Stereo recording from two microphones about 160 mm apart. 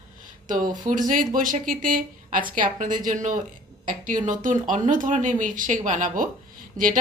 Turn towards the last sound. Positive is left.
turn(degrees=-55)  # may be behind; listen again after turning